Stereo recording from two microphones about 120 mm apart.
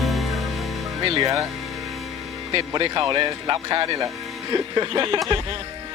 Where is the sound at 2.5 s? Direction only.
45° right (ahead or behind).